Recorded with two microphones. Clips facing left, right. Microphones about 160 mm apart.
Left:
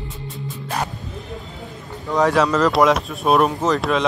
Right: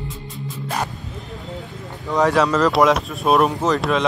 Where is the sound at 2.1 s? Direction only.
Centre (ahead or behind).